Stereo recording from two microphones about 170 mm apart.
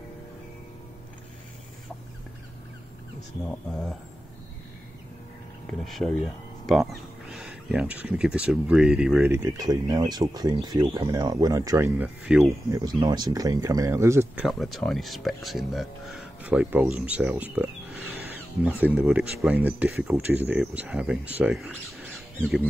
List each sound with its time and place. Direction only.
5.7 s speech: centre (ahead or behind)
9.2 s speech: 20° right (ahead or behind)
12.0 s speech: 5° right (ahead or behind)
12.4 s speech: 20° right (ahead or behind)
14.4 s speech: centre (ahead or behind)